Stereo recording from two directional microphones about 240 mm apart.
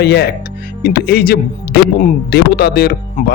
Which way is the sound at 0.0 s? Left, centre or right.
Left.